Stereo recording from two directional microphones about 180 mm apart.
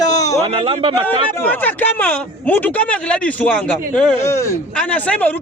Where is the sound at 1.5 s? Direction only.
10° left (ahead or behind).